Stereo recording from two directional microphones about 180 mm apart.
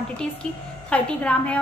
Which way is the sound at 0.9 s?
5° left (ahead or behind).